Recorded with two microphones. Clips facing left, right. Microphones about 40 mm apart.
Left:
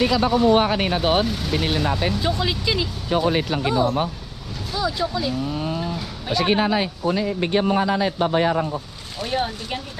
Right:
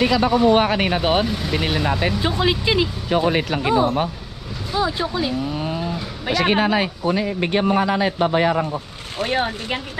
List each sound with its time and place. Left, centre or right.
0.1 s speech: right
1.2 s speech: centre
1.7 s speech: right
2.1 s speech: right
3.1 s speech: right
4.7 s speech: right
6.2 s speech: right
9.2 s speech: right